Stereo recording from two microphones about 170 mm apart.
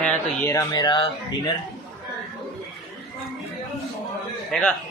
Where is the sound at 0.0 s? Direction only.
10° left (ahead or behind).